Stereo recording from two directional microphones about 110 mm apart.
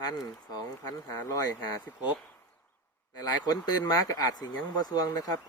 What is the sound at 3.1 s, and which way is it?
Speech, 35° left (ahead or behind).